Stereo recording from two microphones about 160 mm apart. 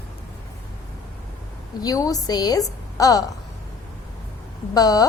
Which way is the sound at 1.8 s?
20° left (ahead or behind).